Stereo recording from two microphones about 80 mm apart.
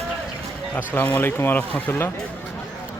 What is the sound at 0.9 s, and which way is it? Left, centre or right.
Speech, left.